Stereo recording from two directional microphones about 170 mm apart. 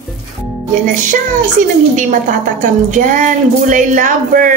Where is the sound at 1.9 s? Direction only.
50° right (ahead or behind).